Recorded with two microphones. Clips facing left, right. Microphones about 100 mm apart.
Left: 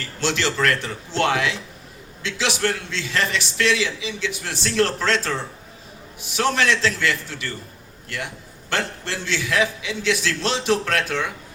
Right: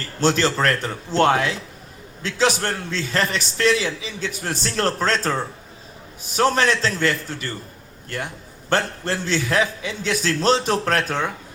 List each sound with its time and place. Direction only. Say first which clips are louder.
0.2 s a man's voice: right 3 dB; 40° right (ahead or behind)
6.3 s a man's voice: right 2 dB; 40° right (ahead or behind)